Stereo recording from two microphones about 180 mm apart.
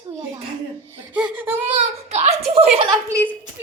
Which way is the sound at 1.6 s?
35° right (ahead or behind).